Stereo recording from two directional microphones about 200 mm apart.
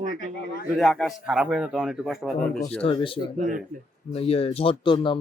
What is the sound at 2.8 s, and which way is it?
Speech, 25° left (ahead or behind).